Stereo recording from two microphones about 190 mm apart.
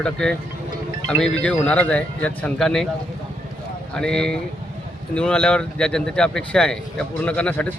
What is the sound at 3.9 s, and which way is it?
Speech, 5° left (ahead or behind).